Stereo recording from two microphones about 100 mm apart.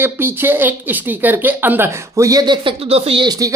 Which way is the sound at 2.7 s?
75° right (ahead or behind).